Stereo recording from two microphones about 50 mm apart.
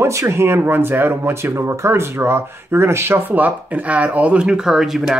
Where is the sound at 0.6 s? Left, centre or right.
Right.